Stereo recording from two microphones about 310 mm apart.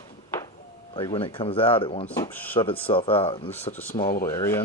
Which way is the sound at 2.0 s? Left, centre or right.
Centre.